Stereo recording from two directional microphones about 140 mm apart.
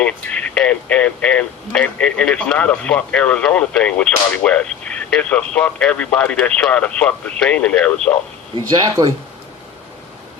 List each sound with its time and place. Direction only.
0.0 s speech: 10° left (ahead or behind)
8.5 s speech: 30° right (ahead or behind)